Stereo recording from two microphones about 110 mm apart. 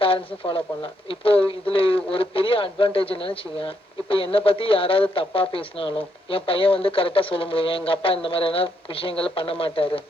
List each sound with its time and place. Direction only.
0.0 s speech: 55° left (ahead or behind)